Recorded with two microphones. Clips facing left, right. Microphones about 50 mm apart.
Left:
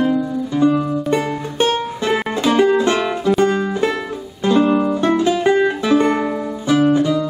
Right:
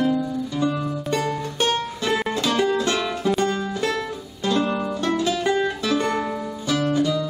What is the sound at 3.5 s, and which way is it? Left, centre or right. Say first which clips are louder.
Music: left 6 dB; left.